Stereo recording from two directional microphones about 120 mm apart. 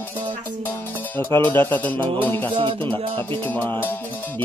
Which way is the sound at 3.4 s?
15° left (ahead or behind).